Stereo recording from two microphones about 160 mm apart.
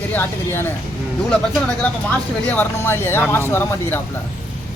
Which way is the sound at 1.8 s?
10° left (ahead or behind).